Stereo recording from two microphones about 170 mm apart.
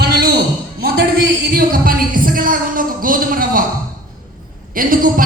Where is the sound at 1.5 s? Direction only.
55° right (ahead or behind).